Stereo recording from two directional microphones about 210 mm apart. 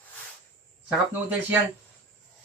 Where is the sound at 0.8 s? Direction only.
10° right (ahead or behind).